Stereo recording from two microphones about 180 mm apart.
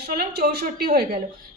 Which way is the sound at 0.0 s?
60° right (ahead or behind).